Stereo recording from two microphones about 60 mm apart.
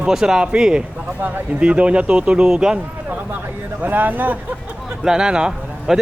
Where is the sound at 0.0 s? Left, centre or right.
Centre.